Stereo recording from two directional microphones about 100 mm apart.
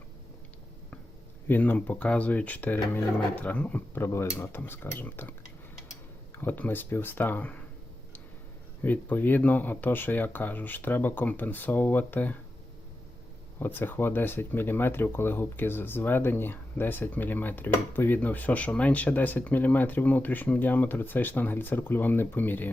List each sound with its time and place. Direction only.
1.5 s speech: 15° left (ahead or behind)
4.0 s speech: 25° left (ahead or behind)
6.3 s speech: 20° left (ahead or behind)
8.8 s speech: 20° left (ahead or behind)
13.6 s speech: 20° left (ahead or behind)